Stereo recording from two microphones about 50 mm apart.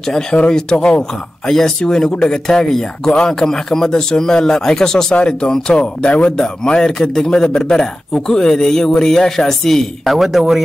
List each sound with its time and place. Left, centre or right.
0.5 s a man's voice: centre